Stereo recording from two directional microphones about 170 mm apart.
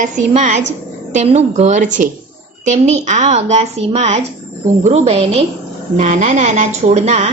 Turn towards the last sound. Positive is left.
turn(degrees=-40)  # may be behind; listen again after turning